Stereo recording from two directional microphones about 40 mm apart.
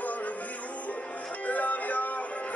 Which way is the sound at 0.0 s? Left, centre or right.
Left.